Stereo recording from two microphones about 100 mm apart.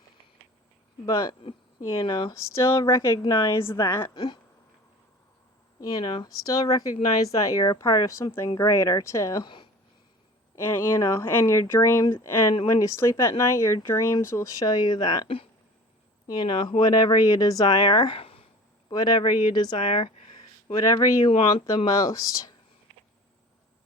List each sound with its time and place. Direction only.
1.4 s speech: 65° left (ahead or behind)
2.3 s a woman's voice: 30° left (ahead or behind)
4.1 s speech: 50° left (ahead or behind)
5.8 s speech: 45° left (ahead or behind); by 9.4 s 30° left (ahead or behind)
9.4 s speech: 50° left (ahead or behind)
10.5 s a woman's voice: 20° left (ahead or behind); by 18.4 s 70° left (ahead or behind)
18.9 s speech: 45° left (ahead or behind); by 20.4 s 70° left (ahead or behind)
20.7 s speech: 45° left (ahead or behind)